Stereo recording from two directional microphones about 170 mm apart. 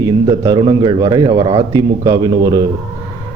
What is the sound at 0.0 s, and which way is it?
A man's voice, 25° right (ahead or behind).